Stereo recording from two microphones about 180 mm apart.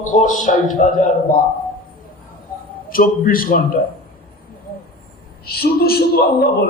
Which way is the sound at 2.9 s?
50° left (ahead or behind).